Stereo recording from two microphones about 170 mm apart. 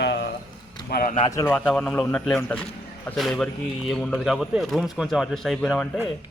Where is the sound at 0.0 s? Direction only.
85° left.